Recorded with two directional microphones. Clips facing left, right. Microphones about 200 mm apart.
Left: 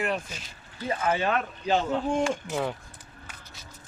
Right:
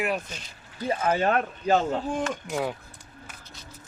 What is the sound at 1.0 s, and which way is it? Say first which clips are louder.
Speech: right 2 dB; 40° right (ahead or behind).